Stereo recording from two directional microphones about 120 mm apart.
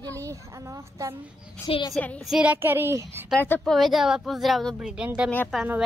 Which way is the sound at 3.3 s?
15° left (ahead or behind).